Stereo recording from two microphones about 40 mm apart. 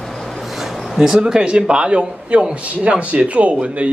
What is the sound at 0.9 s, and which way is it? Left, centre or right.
A man's voice, centre.